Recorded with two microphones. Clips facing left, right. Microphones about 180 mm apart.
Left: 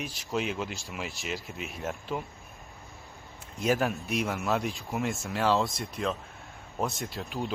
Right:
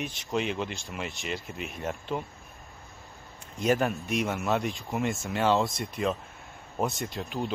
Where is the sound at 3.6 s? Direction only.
Centre (ahead or behind).